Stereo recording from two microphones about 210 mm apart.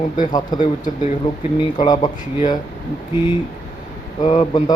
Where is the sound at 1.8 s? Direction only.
20° left (ahead or behind).